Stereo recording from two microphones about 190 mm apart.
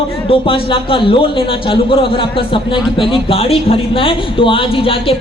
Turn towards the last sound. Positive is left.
turn(degrees=30)  # may be behind; listen again after turning